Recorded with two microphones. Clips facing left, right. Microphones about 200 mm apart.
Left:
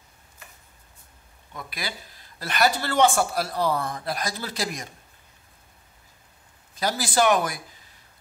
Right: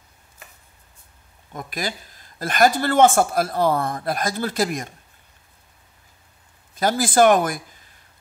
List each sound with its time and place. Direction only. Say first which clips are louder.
1.5 s speech: right 6 dB; 45° right (ahead or behind)
6.7 s speech: right 6 dB; 50° right (ahead or behind)